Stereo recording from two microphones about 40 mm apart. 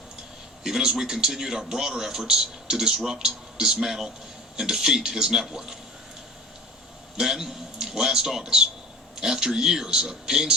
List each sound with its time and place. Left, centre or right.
0.6 s a man's voice: centre
7.2 s a man's voice: centre